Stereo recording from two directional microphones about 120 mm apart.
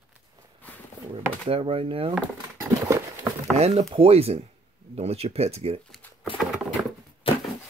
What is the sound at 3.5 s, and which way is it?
Chopping, 60° right (ahead or behind).